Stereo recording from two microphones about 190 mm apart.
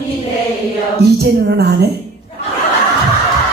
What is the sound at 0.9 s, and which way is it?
Music, 60° right (ahead or behind).